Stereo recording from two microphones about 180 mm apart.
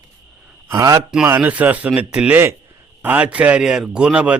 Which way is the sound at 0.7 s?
20° right (ahead or behind).